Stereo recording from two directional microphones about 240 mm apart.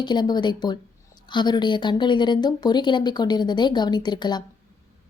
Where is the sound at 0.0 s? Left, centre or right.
Centre.